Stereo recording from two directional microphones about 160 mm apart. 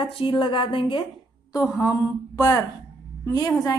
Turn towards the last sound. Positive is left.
turn(degrees=20)  # may be behind; listen again after turning